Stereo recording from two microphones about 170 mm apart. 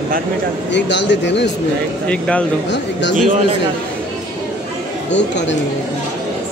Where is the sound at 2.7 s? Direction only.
90° left.